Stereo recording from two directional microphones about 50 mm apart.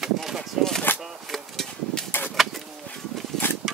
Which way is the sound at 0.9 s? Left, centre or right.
Left.